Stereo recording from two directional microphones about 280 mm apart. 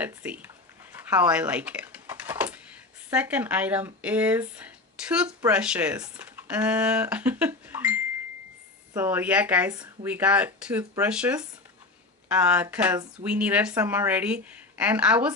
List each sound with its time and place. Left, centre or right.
0.0 s speech: centre
0.9 s a sound: centre
3.1 s speech: centre